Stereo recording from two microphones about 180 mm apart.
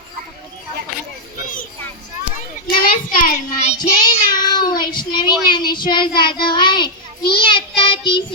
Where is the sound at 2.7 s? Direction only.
50° left (ahead or behind).